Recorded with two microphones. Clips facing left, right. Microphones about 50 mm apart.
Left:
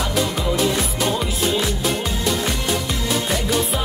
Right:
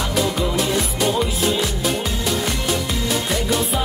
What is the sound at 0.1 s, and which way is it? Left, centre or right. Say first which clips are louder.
Music: right 1 dB; centre.